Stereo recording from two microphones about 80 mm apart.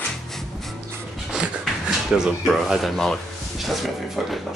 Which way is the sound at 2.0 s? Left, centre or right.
Centre.